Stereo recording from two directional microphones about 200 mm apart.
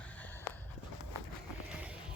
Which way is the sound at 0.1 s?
10° left (ahead or behind).